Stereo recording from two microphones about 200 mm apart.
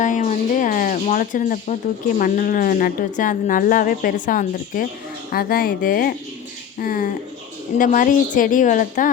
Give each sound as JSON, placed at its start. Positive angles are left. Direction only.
{"t": 0.0, "sound": "speech", "side_deg": 40}